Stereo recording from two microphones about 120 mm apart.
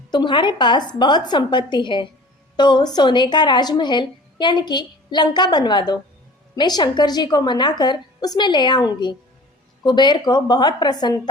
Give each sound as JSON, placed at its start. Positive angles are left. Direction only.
{"t": 0.1, "sound": "a woman's voice", "side_deg": 40}